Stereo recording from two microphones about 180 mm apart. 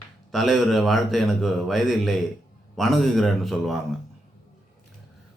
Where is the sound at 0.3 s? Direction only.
Centre (ahead or behind).